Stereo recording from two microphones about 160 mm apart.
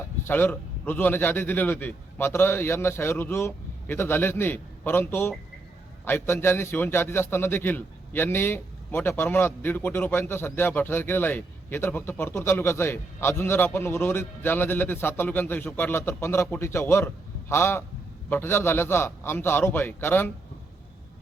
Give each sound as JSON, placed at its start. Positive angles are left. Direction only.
{"t": 0.3, "sound": "a man's voice", "side_deg": 10}